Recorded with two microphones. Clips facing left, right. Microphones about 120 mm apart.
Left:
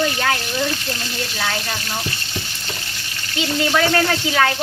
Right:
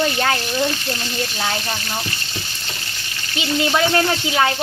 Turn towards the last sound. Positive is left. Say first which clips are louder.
# even
turn(degrees=-20)  # may be behind; listen again after turning